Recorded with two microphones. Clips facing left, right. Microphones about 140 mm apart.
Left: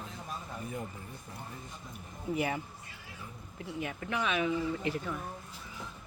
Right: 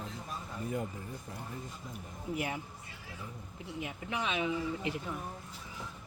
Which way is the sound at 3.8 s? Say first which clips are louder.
Left 3 dB; 15° right (ahead or behind).